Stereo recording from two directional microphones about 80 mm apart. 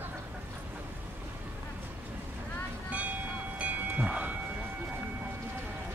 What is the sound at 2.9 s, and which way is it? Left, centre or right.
Train, centre.